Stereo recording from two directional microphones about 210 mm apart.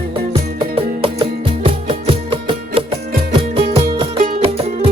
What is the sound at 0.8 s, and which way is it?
Music, 25° right (ahead or behind).